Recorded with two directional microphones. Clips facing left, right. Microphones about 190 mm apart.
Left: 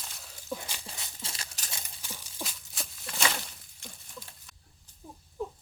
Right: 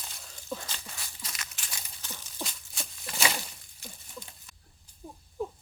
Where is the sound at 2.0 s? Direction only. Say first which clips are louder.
Right 3 dB; 10° left (ahead or behind).